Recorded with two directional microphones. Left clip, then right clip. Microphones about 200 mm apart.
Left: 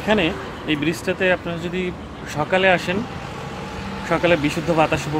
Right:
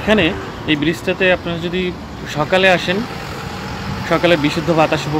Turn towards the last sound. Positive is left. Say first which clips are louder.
# right 4 dB
turn(degrees=-5)  # may be behind; listen again after turning